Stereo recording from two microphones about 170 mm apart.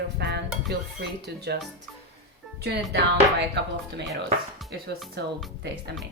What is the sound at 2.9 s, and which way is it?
Music, 85° right.